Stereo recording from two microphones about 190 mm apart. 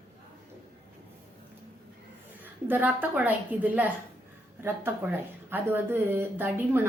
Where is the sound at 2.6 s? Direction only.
10° right (ahead or behind).